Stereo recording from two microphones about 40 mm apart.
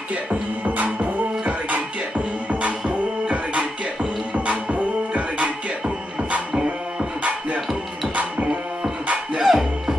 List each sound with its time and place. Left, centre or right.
0.1 s music: right
2.9 s music: right
6.5 s music: right
7.2 s music: right
9.4 s music: centre